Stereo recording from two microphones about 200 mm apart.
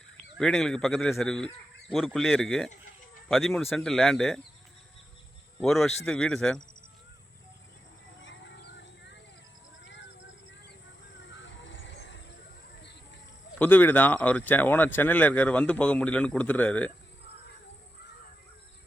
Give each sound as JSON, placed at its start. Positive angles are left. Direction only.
{"t": 0.3, "sound": "a man's voice", "side_deg": 5}
{"t": 5.5, "sound": "a man's voice", "side_deg": 0}
{"t": 8.2, "sound": "a sound", "side_deg": 65}
{"t": 11.2, "sound": "music", "side_deg": 65}
{"t": 13.6, "sound": "a man's voice", "side_deg": 10}